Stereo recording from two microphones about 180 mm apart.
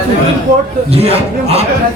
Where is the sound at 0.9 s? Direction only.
35° right (ahead or behind).